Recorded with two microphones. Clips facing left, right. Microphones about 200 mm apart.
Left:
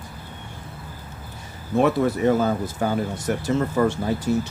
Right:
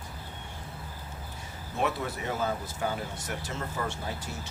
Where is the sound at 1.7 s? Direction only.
50° left (ahead or behind).